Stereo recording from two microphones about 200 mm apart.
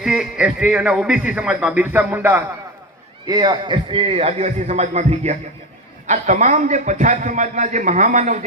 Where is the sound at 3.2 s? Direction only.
20° right (ahead or behind).